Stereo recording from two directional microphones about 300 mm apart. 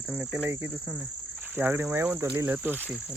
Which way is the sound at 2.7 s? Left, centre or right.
Centre.